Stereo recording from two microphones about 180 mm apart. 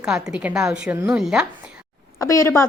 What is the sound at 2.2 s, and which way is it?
Speech, 15° left (ahead or behind).